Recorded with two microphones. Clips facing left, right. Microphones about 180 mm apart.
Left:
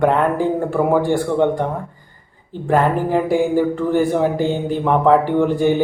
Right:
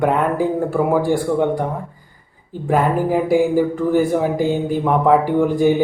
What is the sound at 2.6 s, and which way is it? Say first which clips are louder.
Speech: even; 10° right (ahead or behind).